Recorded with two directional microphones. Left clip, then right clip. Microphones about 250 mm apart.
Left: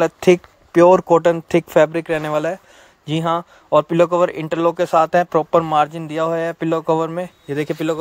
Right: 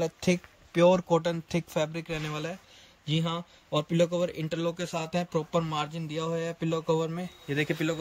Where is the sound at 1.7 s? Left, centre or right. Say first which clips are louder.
Left 17 dB; left.